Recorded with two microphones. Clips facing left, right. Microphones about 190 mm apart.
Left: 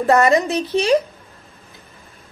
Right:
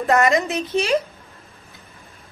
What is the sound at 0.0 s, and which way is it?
Speech, 35° left (ahead or behind).